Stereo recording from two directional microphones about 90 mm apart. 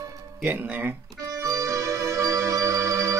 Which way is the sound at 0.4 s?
20° right (ahead or behind).